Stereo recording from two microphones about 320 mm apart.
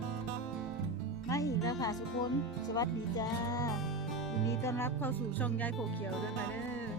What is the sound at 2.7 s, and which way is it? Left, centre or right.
Speech, centre.